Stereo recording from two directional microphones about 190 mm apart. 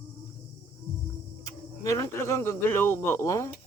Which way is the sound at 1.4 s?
15° left (ahead or behind).